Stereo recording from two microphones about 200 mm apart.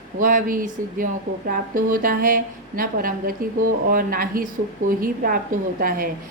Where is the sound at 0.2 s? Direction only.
45° right (ahead or behind).